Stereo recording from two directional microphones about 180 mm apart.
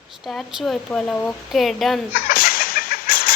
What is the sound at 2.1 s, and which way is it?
Chicken, 55° left (ahead or behind).